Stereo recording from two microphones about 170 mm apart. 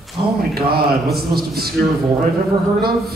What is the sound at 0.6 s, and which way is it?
A man's voice, 65° right (ahead or behind).